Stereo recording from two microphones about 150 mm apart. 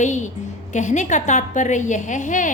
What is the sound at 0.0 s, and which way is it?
A woman's voice, 55° left (ahead or behind).